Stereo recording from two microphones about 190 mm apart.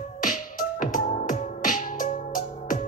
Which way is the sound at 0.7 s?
45° left (ahead or behind).